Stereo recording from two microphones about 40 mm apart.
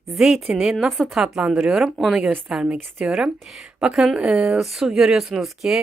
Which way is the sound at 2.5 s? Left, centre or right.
Centre.